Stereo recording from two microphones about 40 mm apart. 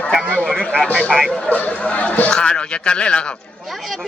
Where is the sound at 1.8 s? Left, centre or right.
Left.